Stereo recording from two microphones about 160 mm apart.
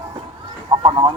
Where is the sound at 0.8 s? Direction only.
30° right (ahead or behind).